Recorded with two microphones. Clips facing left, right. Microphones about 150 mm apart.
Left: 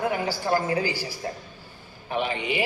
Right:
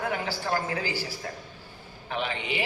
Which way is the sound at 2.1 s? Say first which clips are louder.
Left 4 dB; 15° left (ahead or behind).